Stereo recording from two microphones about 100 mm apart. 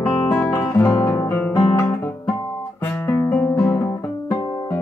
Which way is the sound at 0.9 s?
30° left (ahead or behind).